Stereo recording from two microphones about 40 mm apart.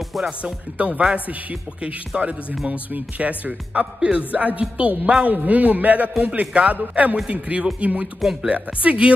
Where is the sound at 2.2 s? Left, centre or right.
Right.